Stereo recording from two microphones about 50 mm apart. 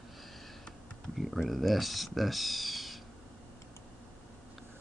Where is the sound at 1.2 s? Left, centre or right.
Centre.